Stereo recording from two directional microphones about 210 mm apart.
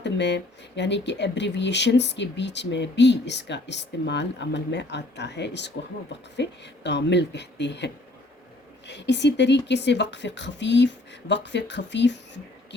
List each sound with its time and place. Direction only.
0.0 s speech: 55° left (ahead or behind)